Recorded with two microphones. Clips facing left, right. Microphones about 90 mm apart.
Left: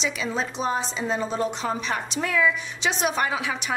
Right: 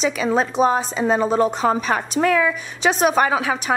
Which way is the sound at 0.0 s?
45° right (ahead or behind).